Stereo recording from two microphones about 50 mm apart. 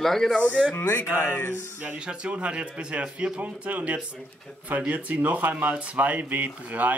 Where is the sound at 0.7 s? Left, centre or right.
Left.